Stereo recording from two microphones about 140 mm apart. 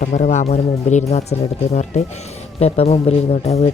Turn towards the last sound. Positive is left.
turn(degrees=45)  # may be behind; listen again after turning